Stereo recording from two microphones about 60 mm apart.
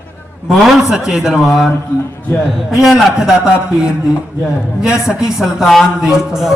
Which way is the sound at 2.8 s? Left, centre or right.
Centre.